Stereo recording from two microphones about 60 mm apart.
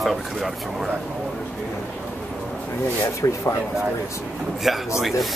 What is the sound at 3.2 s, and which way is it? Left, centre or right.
Speech, left.